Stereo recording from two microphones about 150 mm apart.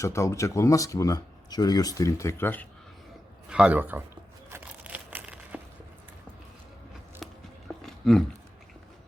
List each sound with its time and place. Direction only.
0.0 s speech: 20° left (ahead or behind)
3.5 s a man's voice: 10° right (ahead or behind)
4.5 s crumpling: 10° right (ahead or behind)
7.2 s biting: centre (ahead or behind)
7.9 s a sound: centre (ahead or behind)